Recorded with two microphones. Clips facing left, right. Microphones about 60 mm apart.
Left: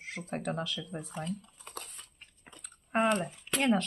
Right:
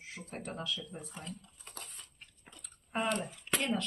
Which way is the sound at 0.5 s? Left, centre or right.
Left.